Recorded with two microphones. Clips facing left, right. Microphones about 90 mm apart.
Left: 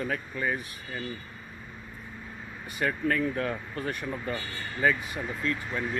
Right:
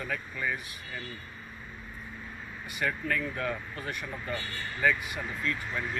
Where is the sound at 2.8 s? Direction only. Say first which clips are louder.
Left 4 dB; 35° left (ahead or behind).